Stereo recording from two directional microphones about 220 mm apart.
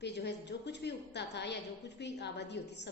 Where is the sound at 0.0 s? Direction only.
50° left (ahead or behind).